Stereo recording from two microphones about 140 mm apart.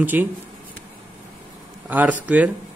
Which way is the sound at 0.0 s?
15° right (ahead or behind).